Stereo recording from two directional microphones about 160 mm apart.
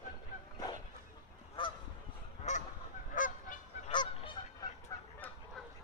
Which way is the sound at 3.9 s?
30° left (ahead or behind).